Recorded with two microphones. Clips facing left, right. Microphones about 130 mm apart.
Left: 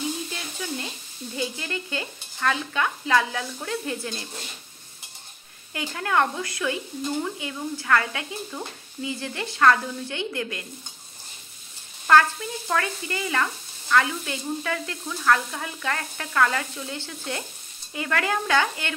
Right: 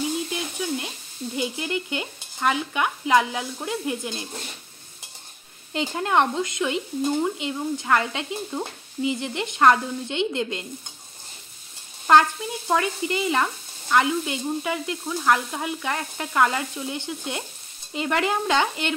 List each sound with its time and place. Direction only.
0.3 s a sound: 15° right (ahead or behind)
1.3 s stir: 15° right (ahead or behind)
5.7 s speech: 20° right (ahead or behind)
12.1 s speech: 20° right (ahead or behind)